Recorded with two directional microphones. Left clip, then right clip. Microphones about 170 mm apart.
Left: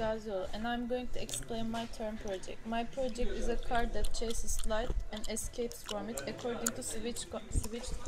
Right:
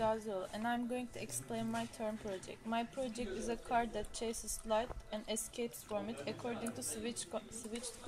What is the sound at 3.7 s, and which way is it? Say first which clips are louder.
Speech: right 1 dB; 60° right (ahead or behind).